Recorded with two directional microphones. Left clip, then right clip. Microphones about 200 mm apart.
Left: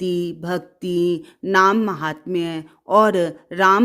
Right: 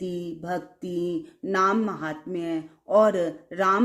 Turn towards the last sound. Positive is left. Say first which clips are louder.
# left 7 dB
turn(degrees=40)  # may be behind; listen again after turning